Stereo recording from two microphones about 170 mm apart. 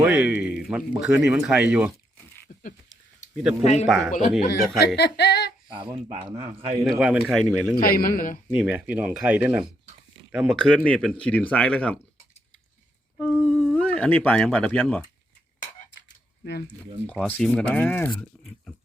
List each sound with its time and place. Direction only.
0.0 s a man's voice: 10° right (ahead or behind)
3.6 s a man's voice: 40° left (ahead or behind)
3.8 s speech: centre (ahead or behind)
4.1 s a man's voice: 55° left (ahead or behind)
4.9 s a sound: 75° left (ahead or behind)
5.6 s speech: 30° right (ahead or behind)
6.8 s speech: centre (ahead or behind)
7.8 s a man's voice: 60° left (ahead or behind)
8.6 s a man's voice: 5° right (ahead or behind)
13.1 s a sound: 5° left (ahead or behind)
14.4 s speech: 5° left (ahead or behind)
16.4 s speech: 70° left (ahead or behind)
17.1 s speech: 5° left (ahead or behind)